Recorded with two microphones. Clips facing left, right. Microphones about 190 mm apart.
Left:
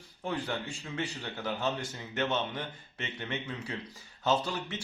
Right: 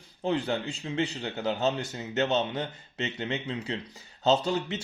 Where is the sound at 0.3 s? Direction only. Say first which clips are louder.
Right 6 dB; 25° right (ahead or behind).